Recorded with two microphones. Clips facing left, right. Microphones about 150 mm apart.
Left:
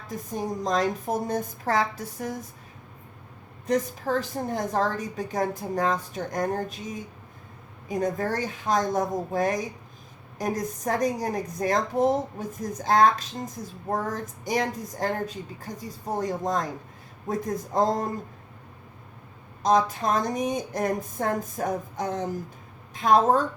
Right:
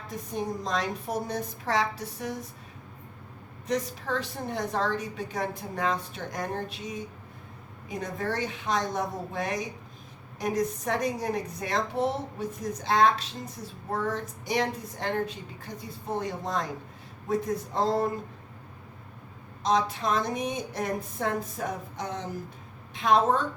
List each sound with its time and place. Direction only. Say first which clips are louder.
0.6 s a woman's voice: left 5 dB; 45° left (ahead or behind)
3.7 s a woman's voice: left 4 dB; 45° left (ahead or behind)
19.6 s a woman's voice: left 4 dB; 45° left (ahead or behind)